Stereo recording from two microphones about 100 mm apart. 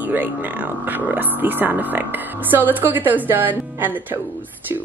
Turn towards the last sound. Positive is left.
turn(degrees=-20)  # may be behind; listen again after turning